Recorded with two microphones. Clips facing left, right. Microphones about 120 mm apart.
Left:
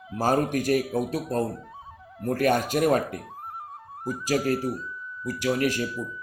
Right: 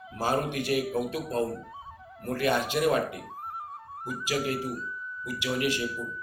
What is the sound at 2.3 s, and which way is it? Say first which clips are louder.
Speech: left 4 dB; 45° left (ahead or behind).